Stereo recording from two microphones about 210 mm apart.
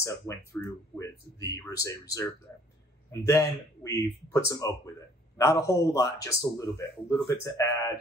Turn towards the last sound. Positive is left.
turn(degrees=15)  # may be behind; listen again after turning